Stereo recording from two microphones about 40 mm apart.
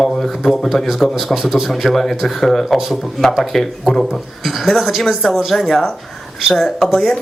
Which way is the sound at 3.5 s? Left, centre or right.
Centre.